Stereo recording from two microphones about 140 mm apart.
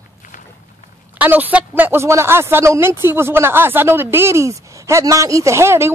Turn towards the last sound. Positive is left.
turn(degrees=-20)  # may be behind; listen again after turning